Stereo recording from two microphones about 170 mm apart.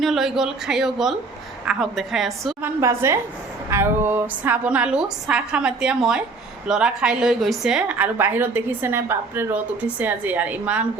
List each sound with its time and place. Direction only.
0.0 s speech: centre (ahead or behind)
2.6 s a woman's voice: 15° right (ahead or behind)